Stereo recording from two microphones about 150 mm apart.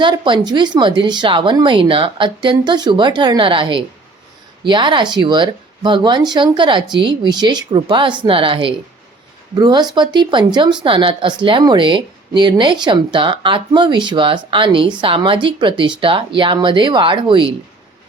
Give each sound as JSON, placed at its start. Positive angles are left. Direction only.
{"t": 0.0, "sound": "speech", "side_deg": -30}